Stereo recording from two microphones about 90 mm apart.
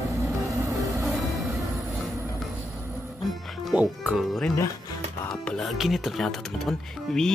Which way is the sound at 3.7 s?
15° right (ahead or behind).